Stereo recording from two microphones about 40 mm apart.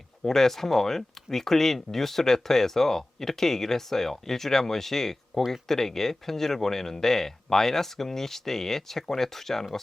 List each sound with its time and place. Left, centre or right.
0.2 s speech: centre